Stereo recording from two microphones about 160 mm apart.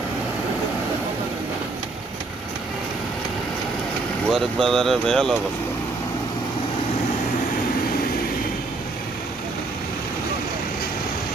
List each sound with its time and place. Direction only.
4.3 s speech: centre (ahead or behind)